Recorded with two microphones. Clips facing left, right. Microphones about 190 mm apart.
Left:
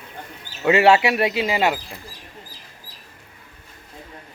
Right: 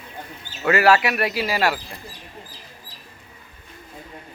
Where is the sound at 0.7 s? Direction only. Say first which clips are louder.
Left 2 dB; 25° left (ahead or behind).